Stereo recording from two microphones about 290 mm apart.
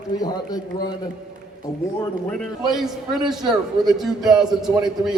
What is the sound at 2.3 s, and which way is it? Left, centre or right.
A man's voice, centre.